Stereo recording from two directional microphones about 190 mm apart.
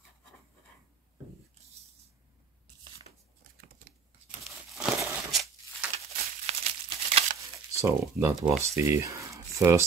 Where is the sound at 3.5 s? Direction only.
50° right (ahead or behind).